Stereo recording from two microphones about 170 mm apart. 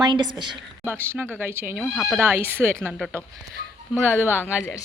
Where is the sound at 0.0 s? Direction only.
25° right (ahead or behind).